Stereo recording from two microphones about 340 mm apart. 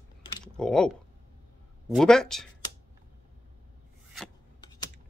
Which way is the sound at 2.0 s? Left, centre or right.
Centre.